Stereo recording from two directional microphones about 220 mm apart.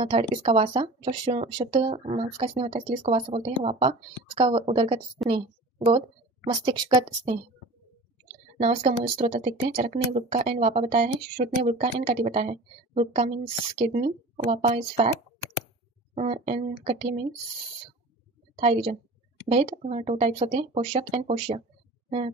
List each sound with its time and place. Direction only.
0.0 s speech: 20° right (ahead or behind)
8.5 s speech: 30° right (ahead or behind)
16.2 s speech: 30° right (ahead or behind)
18.6 s speech: 25° right (ahead or behind)